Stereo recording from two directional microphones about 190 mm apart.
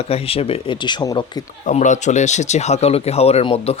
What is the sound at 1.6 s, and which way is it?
Speech, 40° left (ahead or behind).